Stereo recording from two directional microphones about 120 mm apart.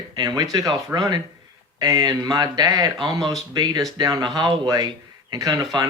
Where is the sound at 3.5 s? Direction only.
35° right (ahead or behind).